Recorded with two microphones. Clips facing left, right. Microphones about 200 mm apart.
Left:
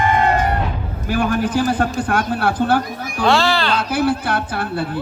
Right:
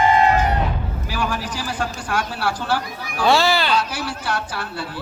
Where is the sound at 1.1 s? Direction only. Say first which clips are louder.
Left 8 dB; 55° left (ahead or behind).